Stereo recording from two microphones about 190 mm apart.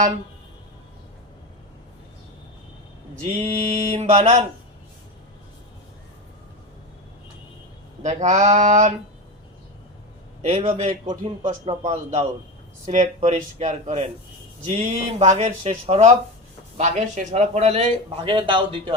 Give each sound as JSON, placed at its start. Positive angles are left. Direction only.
{"t": 3.2, "sound": "a man's voice", "side_deg": -35}
{"t": 8.0, "sound": "a man's voice", "side_deg": -35}
{"t": 10.5, "sound": "a man's voice", "side_deg": -35}